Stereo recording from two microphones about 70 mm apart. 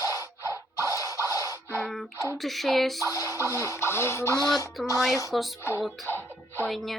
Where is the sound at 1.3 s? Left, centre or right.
Left.